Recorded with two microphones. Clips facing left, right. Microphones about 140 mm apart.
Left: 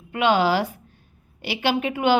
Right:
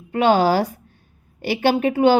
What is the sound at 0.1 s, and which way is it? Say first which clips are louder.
A woman's voice: right 3 dB; 40° right (ahead or behind).